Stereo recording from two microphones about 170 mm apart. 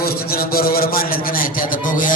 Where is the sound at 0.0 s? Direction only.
60° left (ahead or behind).